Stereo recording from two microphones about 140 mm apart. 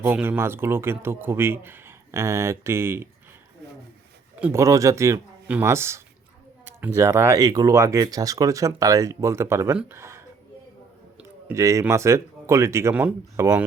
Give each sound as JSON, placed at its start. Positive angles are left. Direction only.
{"t": 0.0, "sound": "speech", "side_deg": -15}
{"t": 4.5, "sound": "speech", "side_deg": -20}
{"t": 11.4, "sound": "speech", "side_deg": -20}